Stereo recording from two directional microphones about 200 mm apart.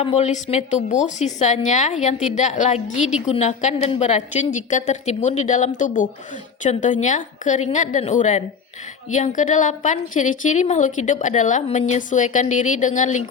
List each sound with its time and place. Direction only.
0.0 s a woman's voice: 30° left (ahead or behind)